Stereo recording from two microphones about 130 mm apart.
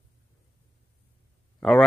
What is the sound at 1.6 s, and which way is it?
Speech, 5° left (ahead or behind).